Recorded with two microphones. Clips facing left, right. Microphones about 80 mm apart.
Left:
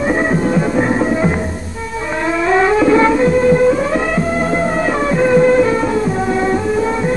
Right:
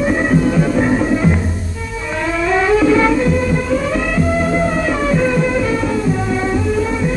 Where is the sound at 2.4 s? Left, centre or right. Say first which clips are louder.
Left 1 dB; left.